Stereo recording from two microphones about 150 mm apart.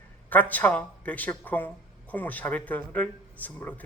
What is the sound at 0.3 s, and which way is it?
A man's voice, 10° left (ahead or behind).